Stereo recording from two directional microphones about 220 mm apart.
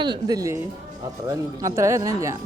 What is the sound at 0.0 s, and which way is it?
Speech, 20° right (ahead or behind).